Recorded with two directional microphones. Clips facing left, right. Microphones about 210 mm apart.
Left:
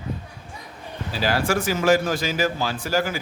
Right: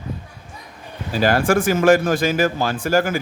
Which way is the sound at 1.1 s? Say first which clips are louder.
Right 6 dB; 50° right (ahead or behind).